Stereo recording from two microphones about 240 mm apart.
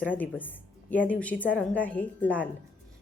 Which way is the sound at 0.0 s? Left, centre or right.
Centre.